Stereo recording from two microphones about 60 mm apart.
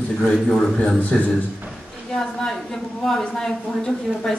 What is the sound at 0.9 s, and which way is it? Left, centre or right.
Speech, left.